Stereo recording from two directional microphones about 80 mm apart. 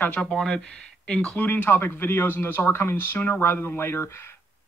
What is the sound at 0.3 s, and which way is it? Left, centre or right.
Speech, centre.